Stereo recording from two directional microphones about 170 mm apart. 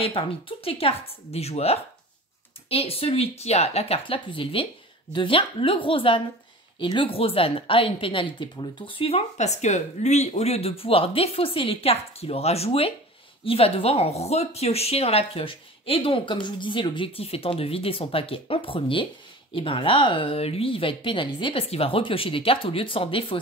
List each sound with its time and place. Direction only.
0.0 s a woman's voice: 30° left (ahead or behind)